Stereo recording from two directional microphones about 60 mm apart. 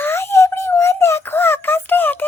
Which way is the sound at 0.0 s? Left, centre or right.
Left.